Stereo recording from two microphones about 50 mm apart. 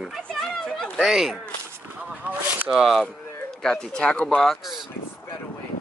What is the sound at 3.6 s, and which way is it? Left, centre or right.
Speech, centre.